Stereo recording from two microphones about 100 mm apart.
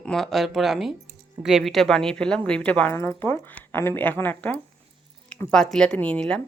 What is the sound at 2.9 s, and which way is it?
Speech, 25° left (ahead or behind).